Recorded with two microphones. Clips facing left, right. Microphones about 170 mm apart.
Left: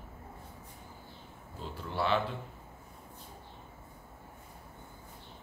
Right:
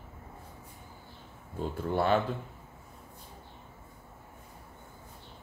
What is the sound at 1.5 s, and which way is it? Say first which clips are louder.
Speech: right 7 dB; 50° right (ahead or behind).